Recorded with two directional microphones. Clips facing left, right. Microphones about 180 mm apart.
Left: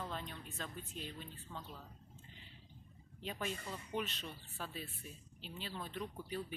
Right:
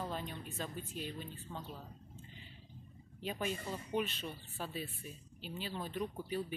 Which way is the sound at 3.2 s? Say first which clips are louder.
Right 4 dB; 10° right (ahead or behind).